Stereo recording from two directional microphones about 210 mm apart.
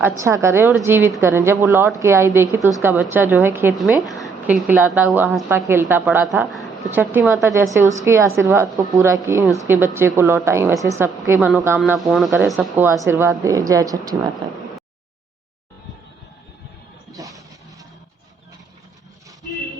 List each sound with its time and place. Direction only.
0.0 s a woman's voice: 15° right (ahead or behind)
11.8 s a woman's voice: centre (ahead or behind); by 14.2 s 15° right (ahead or behind)
17.1 s a sound: 15° right (ahead or behind)